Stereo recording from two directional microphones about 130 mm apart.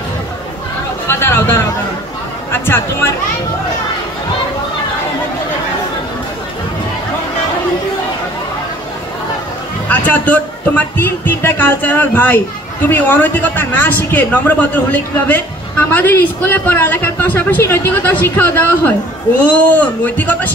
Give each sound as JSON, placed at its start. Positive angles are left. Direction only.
{"t": 1.0, "sound": "chatter", "side_deg": 20}
{"t": 2.5, "sound": "a sound", "side_deg": 15}
{"t": 9.8, "sound": "a man's voice", "side_deg": 10}